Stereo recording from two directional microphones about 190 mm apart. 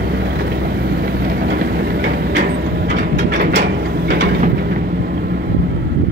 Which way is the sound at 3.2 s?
60° right (ahead or behind).